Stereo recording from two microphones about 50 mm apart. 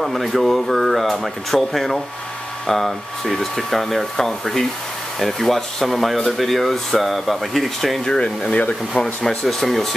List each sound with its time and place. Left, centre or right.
0.0 s speech: centre
8.0 s speech: centre